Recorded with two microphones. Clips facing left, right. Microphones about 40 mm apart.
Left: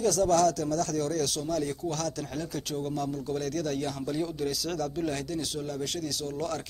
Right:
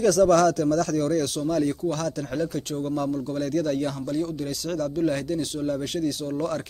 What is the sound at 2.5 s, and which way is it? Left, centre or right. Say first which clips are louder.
Speech: right 5 dB; centre.